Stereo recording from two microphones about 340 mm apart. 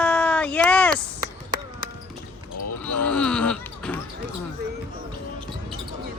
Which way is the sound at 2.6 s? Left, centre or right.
Left.